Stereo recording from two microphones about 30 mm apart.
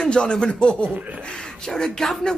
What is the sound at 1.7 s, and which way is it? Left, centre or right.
Speech, centre.